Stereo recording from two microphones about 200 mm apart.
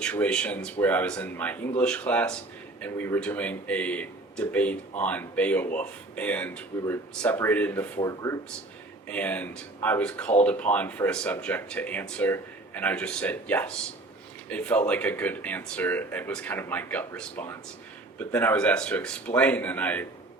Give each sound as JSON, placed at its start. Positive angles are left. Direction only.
{"t": 0.0, "sound": "a man's voice", "side_deg": 5}